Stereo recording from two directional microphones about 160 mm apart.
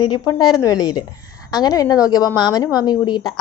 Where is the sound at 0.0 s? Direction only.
30° left (ahead or behind).